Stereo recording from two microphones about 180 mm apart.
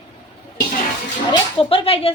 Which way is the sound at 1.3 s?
30° left (ahead or behind).